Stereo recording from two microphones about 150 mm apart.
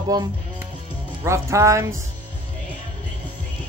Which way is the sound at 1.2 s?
20° right (ahead or behind).